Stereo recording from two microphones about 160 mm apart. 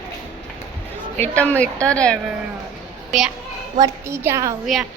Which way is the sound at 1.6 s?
5° left (ahead or behind).